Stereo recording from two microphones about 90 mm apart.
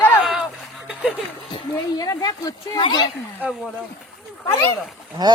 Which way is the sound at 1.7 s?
45° left (ahead or behind).